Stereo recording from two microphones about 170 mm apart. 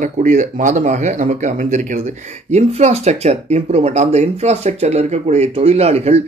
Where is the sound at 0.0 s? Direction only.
45° right (ahead or behind).